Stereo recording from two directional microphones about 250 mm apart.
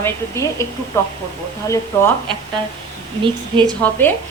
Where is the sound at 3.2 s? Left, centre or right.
Centre.